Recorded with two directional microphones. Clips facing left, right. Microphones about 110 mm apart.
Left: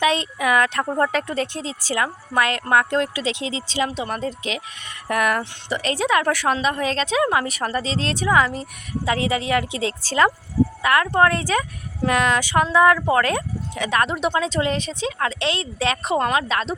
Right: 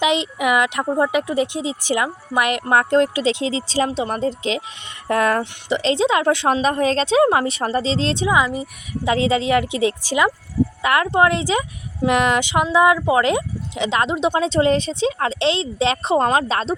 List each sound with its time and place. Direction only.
0.0 s speech: 20° right (ahead or behind)
6.6 s speech: 35° right (ahead or behind)
8.3 s speech: 10° right (ahead or behind)
9.1 s speech: 25° right (ahead or behind)
14.4 s speech: 30° right (ahead or behind)